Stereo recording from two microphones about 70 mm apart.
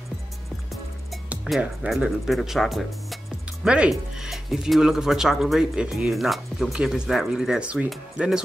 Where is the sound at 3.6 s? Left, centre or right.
Centre.